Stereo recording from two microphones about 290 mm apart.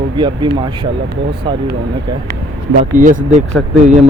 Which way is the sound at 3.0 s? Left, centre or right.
Right.